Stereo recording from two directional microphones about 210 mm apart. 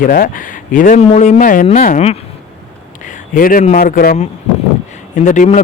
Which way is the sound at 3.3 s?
40° left (ahead or behind).